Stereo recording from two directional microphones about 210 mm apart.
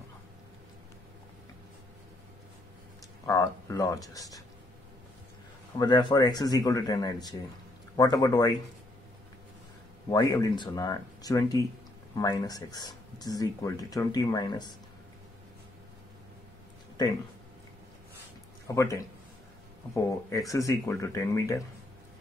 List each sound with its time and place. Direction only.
3.3 s speech: 15° left (ahead or behind)
5.8 s speech: 20° left (ahead or behind)
10.0 s speech: 15° left (ahead or behind)
17.0 s speech: 20° left (ahead or behind)
18.7 s speech: 15° left (ahead or behind)